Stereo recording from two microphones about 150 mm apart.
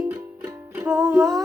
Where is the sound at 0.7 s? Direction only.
15° right (ahead or behind).